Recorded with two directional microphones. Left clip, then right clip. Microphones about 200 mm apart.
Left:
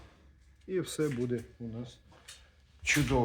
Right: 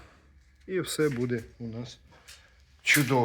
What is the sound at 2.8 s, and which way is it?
Speech, centre (ahead or behind).